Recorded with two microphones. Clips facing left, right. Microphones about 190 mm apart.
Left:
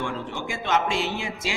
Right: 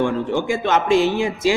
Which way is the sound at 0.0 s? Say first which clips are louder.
Right 10 dB; 55° right (ahead or behind).